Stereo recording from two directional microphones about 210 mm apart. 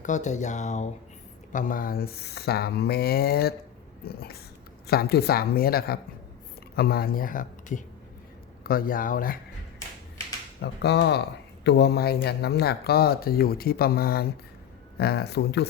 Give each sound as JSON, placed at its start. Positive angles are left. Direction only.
{"t": 0.0, "sound": "speech", "side_deg": 35}
{"t": 10.6, "sound": "speech", "side_deg": 55}